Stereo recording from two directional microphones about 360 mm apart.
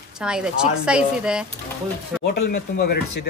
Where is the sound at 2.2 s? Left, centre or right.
Left.